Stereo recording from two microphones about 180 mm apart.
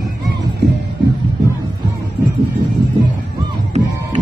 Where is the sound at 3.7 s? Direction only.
35° right (ahead or behind).